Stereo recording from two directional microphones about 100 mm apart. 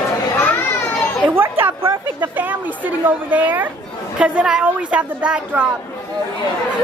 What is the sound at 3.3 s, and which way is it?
Speech, 20° right (ahead or behind).